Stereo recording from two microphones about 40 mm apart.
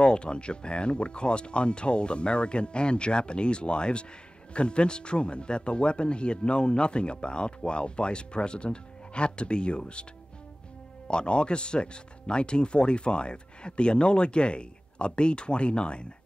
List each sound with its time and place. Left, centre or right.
0.0 s speech: left
11.1 s speech: left